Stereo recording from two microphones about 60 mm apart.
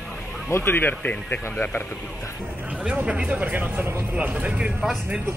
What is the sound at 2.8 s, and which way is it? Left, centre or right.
Speech, right.